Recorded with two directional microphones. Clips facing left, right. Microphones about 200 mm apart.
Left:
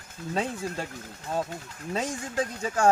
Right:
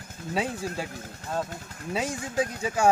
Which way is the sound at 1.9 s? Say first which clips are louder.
Right 1 dB; 5° right (ahead or behind).